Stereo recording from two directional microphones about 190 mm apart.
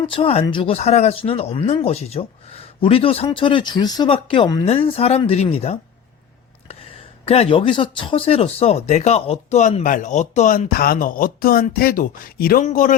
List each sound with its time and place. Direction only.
0.0 s speech: 30° left (ahead or behind)
7.3 s speech: 30° left (ahead or behind)